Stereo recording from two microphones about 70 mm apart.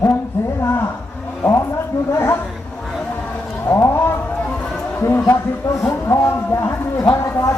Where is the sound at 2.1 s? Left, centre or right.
Left.